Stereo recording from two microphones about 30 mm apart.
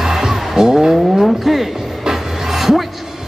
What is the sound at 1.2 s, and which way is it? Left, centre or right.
Vehicle, centre.